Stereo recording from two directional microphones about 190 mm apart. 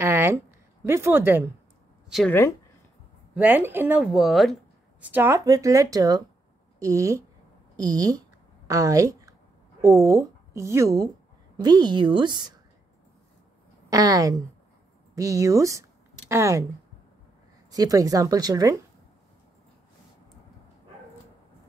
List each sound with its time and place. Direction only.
0.0 s a sound: 15° right (ahead or behind)
0.8 s speech: 10° right (ahead or behind)
2.0 s speech: centre (ahead or behind)
3.3 s speech: 10° right (ahead or behind)
5.1 s a woman's voice: 15° right (ahead or behind)
13.8 s a woman's voice: 20° right (ahead or behind)
17.6 s a woman's voice: 20° right (ahead or behind)